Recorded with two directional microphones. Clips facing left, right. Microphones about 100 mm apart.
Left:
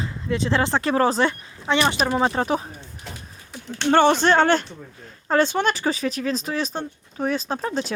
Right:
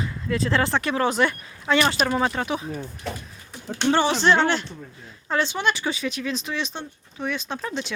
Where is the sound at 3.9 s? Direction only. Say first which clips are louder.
Left 4 dB; 50° left (ahead or behind).